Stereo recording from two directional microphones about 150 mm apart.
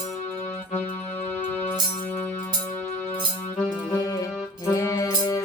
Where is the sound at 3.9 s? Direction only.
25° left (ahead or behind).